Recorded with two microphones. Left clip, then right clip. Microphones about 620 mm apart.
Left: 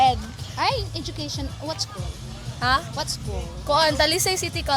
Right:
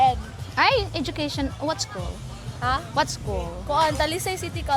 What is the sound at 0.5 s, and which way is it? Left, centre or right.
Speech, right.